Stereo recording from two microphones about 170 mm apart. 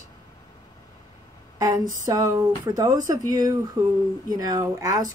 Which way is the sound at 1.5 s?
20° right (ahead or behind).